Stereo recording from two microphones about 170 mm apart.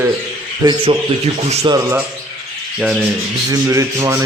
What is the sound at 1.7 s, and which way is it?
Speech, 15° right (ahead or behind).